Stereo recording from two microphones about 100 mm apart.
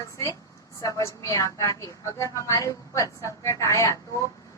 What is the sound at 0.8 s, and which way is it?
A woman's voice, 35° left (ahead or behind).